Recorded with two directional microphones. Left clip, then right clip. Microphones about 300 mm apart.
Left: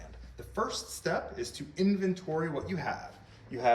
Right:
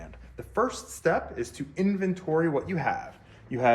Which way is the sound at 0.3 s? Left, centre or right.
Centre.